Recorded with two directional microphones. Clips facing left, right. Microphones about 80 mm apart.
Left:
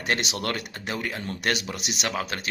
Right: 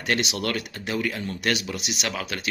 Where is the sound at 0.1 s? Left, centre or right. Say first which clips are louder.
Right 2 dB; left.